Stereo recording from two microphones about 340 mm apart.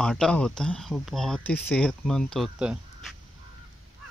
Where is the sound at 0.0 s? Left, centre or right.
Centre.